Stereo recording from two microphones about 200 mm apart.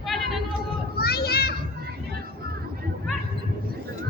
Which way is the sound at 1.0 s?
50° left (ahead or behind).